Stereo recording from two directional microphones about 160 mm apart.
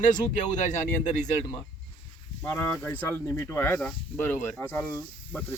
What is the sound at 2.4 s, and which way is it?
Speech, 10° left (ahead or behind).